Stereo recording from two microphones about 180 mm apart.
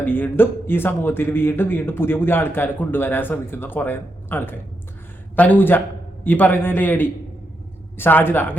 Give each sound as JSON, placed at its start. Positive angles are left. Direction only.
{"t": 0.0, "sound": "a man's voice", "side_deg": 10}